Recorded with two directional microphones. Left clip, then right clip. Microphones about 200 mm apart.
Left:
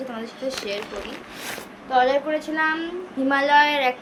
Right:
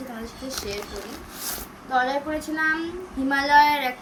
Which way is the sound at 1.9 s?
15° right (ahead or behind).